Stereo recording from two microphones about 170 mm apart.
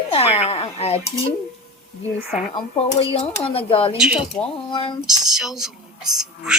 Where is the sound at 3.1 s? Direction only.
35° left (ahead or behind).